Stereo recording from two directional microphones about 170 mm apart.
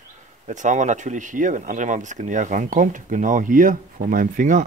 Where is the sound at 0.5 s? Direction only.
45° right (ahead or behind).